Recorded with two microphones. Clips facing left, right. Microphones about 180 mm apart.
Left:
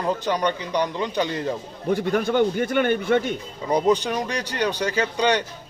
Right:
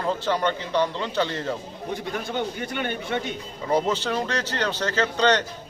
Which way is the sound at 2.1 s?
55° left (ahead or behind).